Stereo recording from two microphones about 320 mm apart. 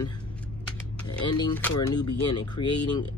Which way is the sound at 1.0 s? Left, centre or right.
Centre.